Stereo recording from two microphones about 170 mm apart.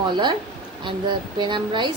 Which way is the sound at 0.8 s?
25° right (ahead or behind).